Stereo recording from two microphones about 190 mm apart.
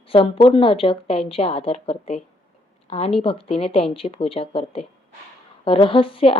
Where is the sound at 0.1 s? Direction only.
30° left (ahead or behind).